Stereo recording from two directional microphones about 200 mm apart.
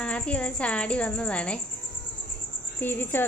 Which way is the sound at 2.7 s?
10° left (ahead or behind).